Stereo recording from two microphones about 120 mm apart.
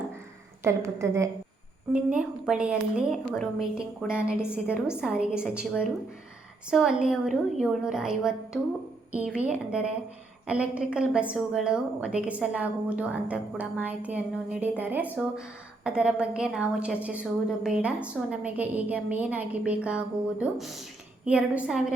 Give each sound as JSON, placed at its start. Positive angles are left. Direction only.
{"t": 0.6, "sound": "a woman's voice", "side_deg": -25}
{"t": 1.9, "sound": "a woman's voice", "side_deg": -10}